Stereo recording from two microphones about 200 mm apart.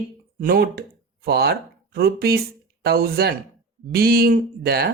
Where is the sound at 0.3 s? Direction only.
50° right (ahead or behind).